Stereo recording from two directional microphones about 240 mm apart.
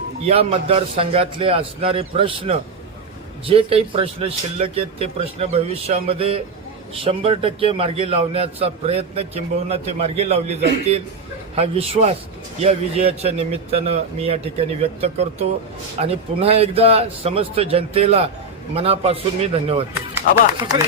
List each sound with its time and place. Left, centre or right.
0.3 s a man's voice: right
20.1 s speech: centre